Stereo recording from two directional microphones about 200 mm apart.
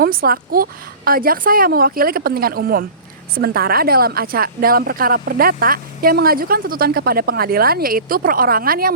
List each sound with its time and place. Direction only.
0.0 s a woman's voice: 45° right (ahead or behind)